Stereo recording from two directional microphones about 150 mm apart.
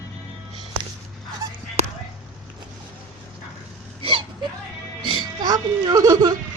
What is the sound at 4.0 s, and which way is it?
Whimper, 35° right (ahead or behind).